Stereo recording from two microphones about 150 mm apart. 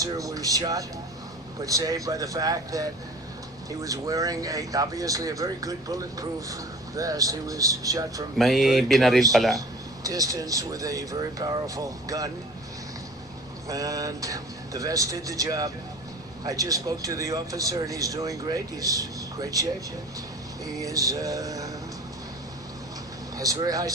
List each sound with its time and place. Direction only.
0.0 s speech: 25° right (ahead or behind)
8.4 s speech: centre (ahead or behind)
9.6 s speech: 25° right (ahead or behind)
13.7 s speech: 25° right (ahead or behind)
20.7 s speech: 25° right (ahead or behind)
23.4 s speech: 25° right (ahead or behind)